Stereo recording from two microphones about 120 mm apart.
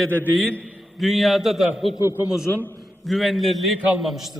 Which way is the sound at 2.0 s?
20° right (ahead or behind).